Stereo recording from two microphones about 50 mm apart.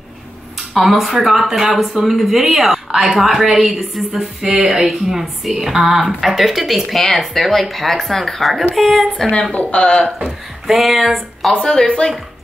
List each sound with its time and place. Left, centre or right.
0.6 s a woman's voice: centre
9.3 s speech: left
10.2 s speech: centre
11.7 s speech: centre